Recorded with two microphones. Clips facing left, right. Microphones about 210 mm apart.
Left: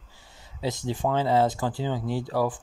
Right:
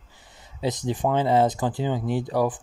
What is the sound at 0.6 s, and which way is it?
Speech, 20° right (ahead or behind).